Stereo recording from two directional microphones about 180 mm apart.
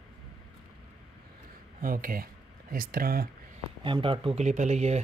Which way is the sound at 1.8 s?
50° right (ahead or behind).